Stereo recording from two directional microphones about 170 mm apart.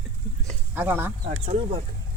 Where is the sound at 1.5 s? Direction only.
35° right (ahead or behind).